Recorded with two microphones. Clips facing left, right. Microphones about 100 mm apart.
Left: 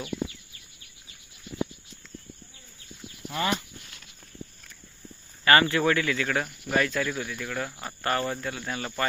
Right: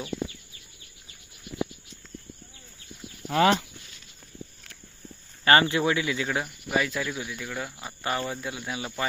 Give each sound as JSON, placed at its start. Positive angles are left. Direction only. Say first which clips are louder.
{"t": 3.2, "sound": "speech", "louder": "right 7 dB", "side_deg": -70}
{"t": 5.5, "sound": "speech", "louder": "even", "side_deg": -20}